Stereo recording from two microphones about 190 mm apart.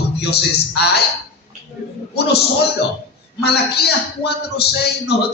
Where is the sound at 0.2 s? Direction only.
60° left (ahead or behind).